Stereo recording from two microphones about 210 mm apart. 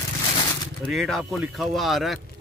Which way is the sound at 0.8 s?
Centre (ahead or behind).